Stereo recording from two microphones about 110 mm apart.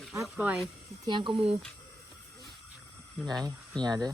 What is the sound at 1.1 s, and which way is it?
Speech, 45° right (ahead or behind).